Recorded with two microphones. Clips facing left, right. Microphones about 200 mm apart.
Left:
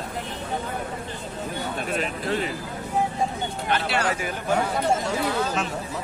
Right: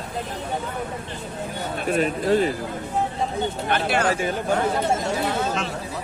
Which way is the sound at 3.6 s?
50° right (ahead or behind).